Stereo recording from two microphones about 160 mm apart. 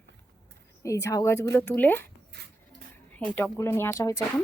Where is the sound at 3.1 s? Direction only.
10° left (ahead or behind).